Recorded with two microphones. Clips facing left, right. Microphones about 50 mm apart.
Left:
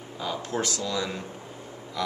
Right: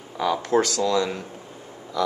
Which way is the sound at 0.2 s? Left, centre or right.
Right.